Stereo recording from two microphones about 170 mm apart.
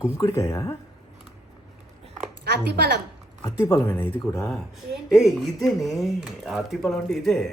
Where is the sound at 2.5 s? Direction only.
75° right (ahead or behind).